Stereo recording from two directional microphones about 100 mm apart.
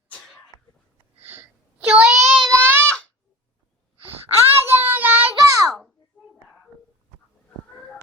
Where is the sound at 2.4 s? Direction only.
5° left (ahead or behind).